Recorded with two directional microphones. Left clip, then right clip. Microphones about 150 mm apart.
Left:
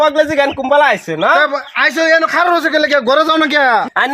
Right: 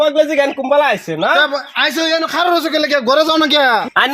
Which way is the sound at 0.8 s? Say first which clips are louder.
Left 3 dB; 15° right (ahead or behind).